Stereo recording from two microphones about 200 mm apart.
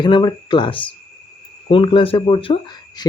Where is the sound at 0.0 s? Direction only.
25° left (ahead or behind).